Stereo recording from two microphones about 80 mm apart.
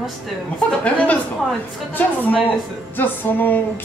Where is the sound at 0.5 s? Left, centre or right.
Centre.